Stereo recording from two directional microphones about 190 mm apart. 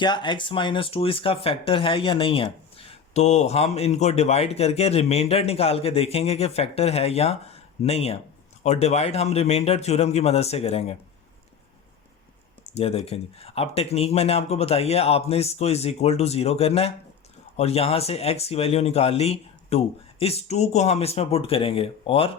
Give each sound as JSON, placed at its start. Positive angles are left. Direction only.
{"t": 0.0, "sound": "speech", "side_deg": 25}
{"t": 12.6, "sound": "speech", "side_deg": 35}